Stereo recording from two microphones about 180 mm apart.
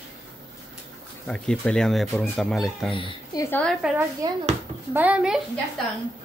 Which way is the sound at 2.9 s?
30° left (ahead or behind).